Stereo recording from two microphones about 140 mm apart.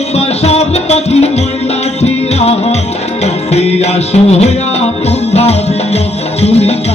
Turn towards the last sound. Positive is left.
turn(degrees=50)  # may be behind; listen again after turning